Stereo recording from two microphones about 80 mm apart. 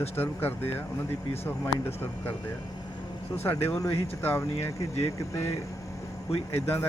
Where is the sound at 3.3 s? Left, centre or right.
Left.